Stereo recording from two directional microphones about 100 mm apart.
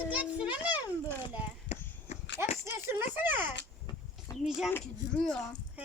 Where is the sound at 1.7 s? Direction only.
90° left.